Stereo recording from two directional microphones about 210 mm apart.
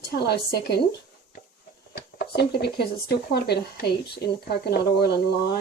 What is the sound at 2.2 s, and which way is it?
Speech, 50° left (ahead or behind).